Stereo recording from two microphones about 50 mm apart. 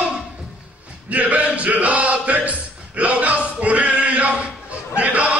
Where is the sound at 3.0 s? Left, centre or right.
Right.